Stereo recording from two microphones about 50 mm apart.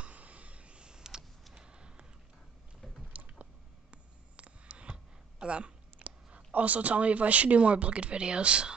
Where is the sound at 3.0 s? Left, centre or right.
Right.